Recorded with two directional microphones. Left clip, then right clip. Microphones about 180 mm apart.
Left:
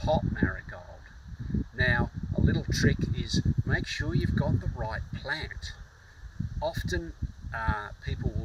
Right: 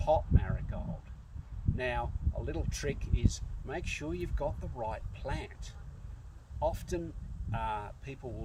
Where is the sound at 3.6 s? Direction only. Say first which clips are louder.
Left 2 dB; 5° right (ahead or behind).